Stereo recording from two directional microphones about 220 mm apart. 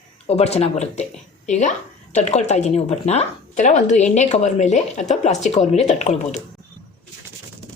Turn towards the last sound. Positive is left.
turn(degrees=30)  # may be behind; listen again after turning